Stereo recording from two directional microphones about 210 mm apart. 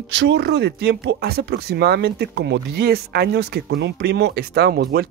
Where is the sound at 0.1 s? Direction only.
55° right (ahead or behind).